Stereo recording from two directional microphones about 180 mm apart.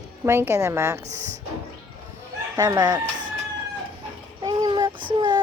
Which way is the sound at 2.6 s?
20° right (ahead or behind).